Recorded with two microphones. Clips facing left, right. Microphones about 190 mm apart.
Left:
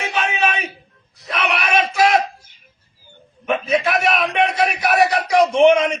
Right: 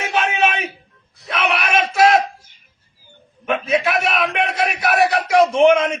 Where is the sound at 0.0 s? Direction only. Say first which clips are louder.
Right 2 dB; centre (ahead or behind).